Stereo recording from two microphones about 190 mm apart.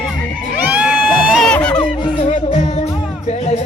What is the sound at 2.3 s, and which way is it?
Music, 35° left (ahead or behind).